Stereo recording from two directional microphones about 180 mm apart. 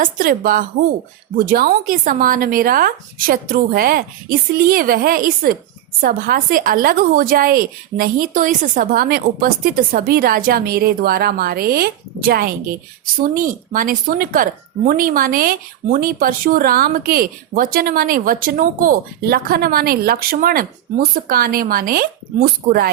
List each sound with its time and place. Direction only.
0.0 s a woman's voice: 50° right (ahead or behind)